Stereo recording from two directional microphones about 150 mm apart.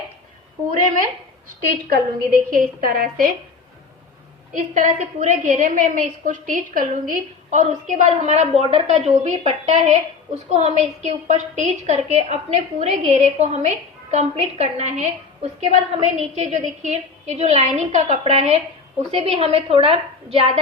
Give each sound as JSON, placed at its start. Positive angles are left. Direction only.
{"t": 1.6, "sound": "a woman's voice", "side_deg": -80}
{"t": 4.5, "sound": "a woman's voice", "side_deg": -60}